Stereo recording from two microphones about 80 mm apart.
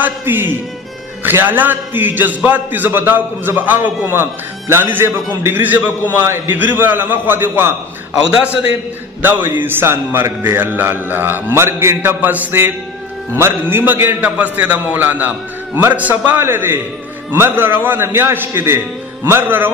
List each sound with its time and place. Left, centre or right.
0.0 s a man's voice: right
9.2 s a man's voice: right
12.2 s a man's voice: right